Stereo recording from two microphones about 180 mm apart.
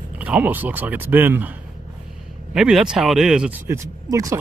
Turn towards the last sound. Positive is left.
turn(degrees=-15)  # may be behind; listen again after turning